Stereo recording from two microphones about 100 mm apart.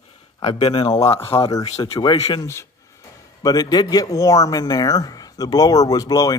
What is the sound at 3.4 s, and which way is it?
Speech, 40° left (ahead or behind).